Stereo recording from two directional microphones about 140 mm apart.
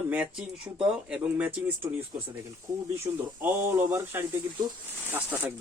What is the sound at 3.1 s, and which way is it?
Speech, 15° right (ahead or behind).